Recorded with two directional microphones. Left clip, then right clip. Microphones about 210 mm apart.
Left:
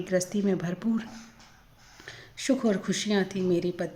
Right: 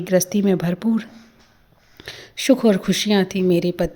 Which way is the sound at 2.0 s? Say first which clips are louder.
Right 11 dB; 45° right (ahead or behind).